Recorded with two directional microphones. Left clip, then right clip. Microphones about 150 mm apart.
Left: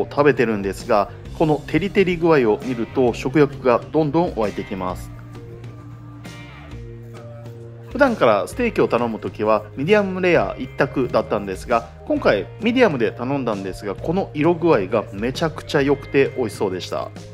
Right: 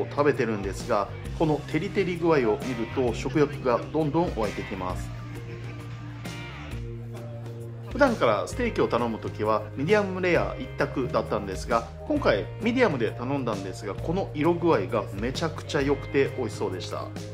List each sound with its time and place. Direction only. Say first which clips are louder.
0.1 s speech: left 8 dB; 30° left (ahead or behind)
4.4 s speech: left 6 dB; centre (ahead or behind)
8.2 s speech: left 7 dB; 25° left (ahead or behind)